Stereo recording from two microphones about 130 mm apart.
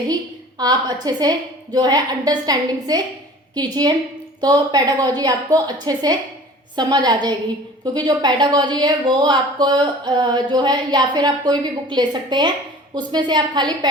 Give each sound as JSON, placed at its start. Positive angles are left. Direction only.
{"t": 0.6, "sound": "speech", "side_deg": -30}